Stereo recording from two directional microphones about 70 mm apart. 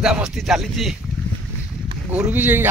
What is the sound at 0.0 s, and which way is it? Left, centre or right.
Speech, centre.